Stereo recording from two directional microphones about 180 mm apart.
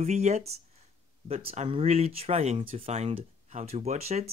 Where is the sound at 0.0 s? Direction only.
40° right (ahead or behind).